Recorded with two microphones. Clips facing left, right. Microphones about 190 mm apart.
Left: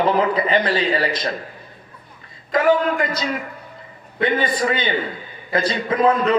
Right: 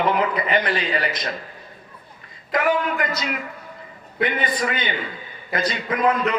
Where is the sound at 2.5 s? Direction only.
30° left (ahead or behind).